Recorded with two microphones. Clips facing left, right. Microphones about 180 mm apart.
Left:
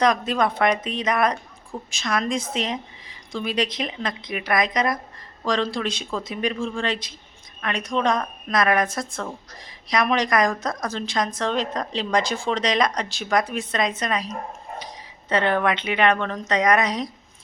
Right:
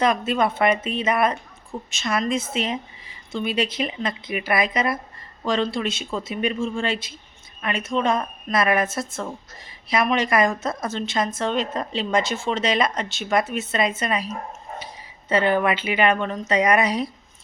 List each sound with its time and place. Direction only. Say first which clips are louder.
0.0 s a woman's voice: even; 5° right (ahead or behind)